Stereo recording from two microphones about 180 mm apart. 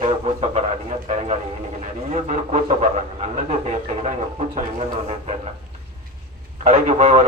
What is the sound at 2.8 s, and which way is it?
Speech, 40° right (ahead or behind).